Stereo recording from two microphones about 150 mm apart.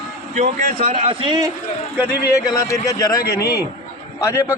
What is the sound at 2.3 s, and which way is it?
A man's voice, 20° left (ahead or behind).